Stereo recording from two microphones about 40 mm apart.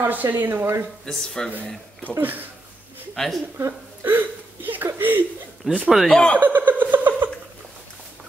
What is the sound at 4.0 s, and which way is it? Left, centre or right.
Speech, right.